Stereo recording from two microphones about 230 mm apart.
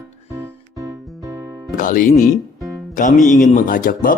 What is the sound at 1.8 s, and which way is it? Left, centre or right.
Speech, left.